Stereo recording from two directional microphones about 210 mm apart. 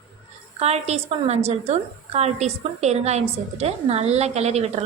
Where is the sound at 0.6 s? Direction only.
30° right (ahead or behind).